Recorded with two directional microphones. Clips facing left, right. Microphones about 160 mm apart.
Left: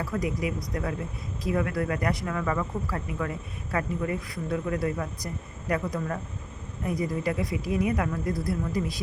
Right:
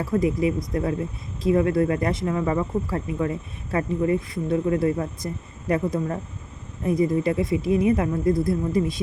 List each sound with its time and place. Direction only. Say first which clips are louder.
0.0 s speech: right 7 dB; 25° right (ahead or behind)